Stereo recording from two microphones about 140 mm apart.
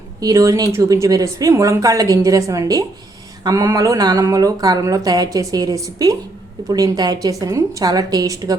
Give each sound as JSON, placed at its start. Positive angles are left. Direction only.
{"t": 0.2, "sound": "a woman's voice", "side_deg": -25}